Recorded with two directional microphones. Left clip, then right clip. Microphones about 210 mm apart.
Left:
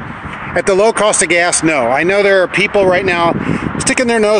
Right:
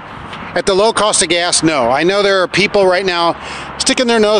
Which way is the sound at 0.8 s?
5° right (ahead or behind).